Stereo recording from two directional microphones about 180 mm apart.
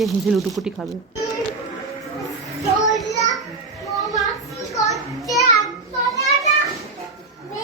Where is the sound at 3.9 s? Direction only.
Centre (ahead or behind).